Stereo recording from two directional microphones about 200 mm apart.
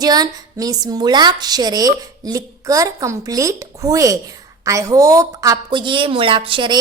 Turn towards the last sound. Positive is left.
turn(degrees=-25)  # may be behind; listen again after turning